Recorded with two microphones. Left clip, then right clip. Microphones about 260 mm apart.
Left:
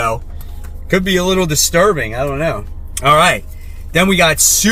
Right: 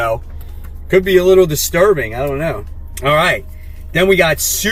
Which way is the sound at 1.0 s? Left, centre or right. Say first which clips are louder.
Right 5 dB; centre.